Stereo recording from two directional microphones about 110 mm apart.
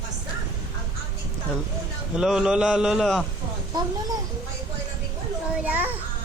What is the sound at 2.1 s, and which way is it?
A man's voice, 5° right (ahead or behind).